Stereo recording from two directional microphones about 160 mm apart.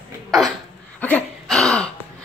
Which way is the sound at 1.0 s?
5° left (ahead or behind).